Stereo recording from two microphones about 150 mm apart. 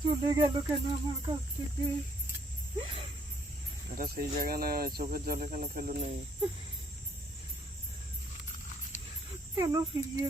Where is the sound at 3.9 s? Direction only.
70° right (ahead or behind).